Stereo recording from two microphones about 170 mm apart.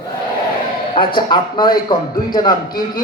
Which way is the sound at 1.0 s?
25° left (ahead or behind).